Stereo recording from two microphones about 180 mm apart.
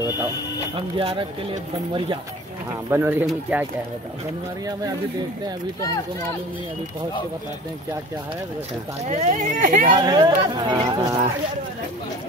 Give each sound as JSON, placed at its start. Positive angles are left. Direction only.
{"t": 0.7, "sound": "speech", "side_deg": -30}
{"t": 2.9, "sound": "speech", "side_deg": -10}
{"t": 9.0, "sound": "speech", "side_deg": -40}
{"t": 9.9, "sound": "speech", "side_deg": -20}